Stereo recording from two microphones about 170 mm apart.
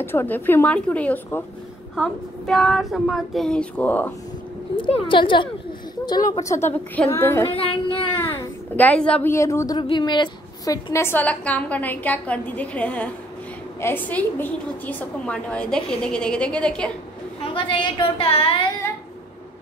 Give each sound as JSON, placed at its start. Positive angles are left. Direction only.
{"t": 0.0, "sound": "a woman's voice", "side_deg": 15}
{"t": 4.7, "sound": "a woman's voice", "side_deg": 30}
{"t": 7.5, "sound": "child singing", "side_deg": 30}
{"t": 8.1, "sound": "a child's voice", "side_deg": 10}
{"t": 9.8, "sound": "a woman's voice", "side_deg": 25}
{"t": 17.5, "sound": "a woman's voice", "side_deg": 30}